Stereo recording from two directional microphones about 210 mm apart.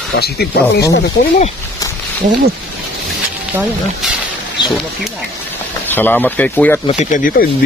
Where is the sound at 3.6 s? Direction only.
Centre (ahead or behind).